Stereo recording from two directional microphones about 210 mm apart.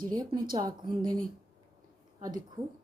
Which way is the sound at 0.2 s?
15° right (ahead or behind).